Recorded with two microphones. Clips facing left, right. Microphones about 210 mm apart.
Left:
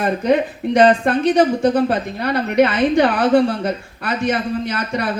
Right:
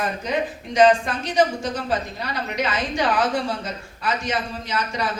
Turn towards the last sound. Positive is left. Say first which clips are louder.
# left 5 dB
turn(degrees=60)  # may be behind; listen again after turning